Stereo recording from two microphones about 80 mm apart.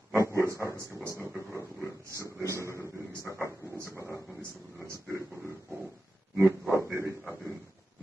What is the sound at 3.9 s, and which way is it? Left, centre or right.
Speech, right.